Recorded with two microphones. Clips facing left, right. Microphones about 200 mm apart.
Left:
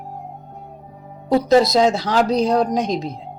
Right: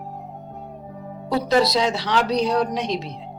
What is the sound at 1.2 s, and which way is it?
Speech, 45° left (ahead or behind).